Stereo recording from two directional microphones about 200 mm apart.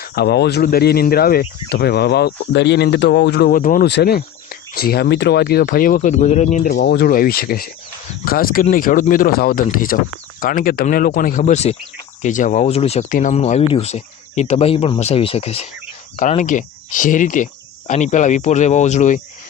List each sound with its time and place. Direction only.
0.0 s speech: 50° left (ahead or behind); by 6.7 s 35° left (ahead or behind)
6.7 s speech: 55° left (ahead or behind); by 19.2 s 35° left (ahead or behind)